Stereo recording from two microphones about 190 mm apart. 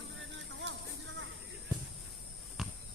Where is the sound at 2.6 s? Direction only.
Centre (ahead or behind).